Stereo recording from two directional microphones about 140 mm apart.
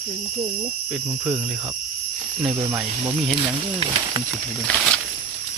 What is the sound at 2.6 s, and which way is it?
Speech, 25° right (ahead or behind).